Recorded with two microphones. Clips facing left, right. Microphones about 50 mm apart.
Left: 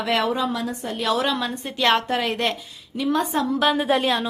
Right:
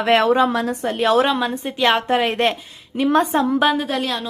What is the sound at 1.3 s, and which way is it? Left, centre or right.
Speech, right.